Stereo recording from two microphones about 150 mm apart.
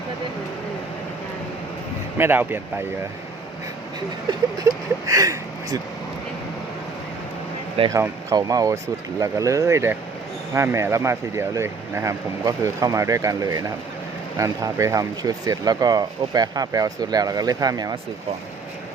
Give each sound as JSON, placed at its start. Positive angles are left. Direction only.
{"t": 2.1, "sound": "speech", "side_deg": -15}
{"t": 5.0, "sound": "speech", "side_deg": -20}
{"t": 7.9, "sound": "speech", "side_deg": -20}